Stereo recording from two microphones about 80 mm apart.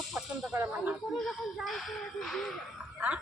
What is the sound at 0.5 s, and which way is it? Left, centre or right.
Speech, right.